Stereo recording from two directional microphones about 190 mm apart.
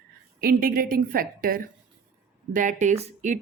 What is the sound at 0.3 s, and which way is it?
A woman's voice, 50° right (ahead or behind).